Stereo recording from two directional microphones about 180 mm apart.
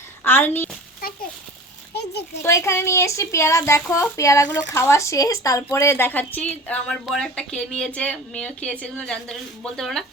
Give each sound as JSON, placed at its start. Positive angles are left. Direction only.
{"t": 0.3, "sound": "speech", "side_deg": 10}
{"t": 1.0, "sound": "a child's voice", "side_deg": 55}
{"t": 2.0, "sound": "a child's voice", "side_deg": 65}
{"t": 2.4, "sound": "speech", "side_deg": 15}